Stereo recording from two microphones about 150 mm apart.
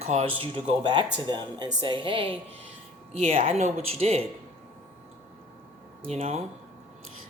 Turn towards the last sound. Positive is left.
turn(degrees=-45)  # may be behind; listen again after turning